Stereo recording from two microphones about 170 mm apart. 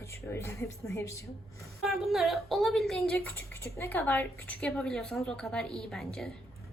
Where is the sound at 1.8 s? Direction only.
Centre (ahead or behind).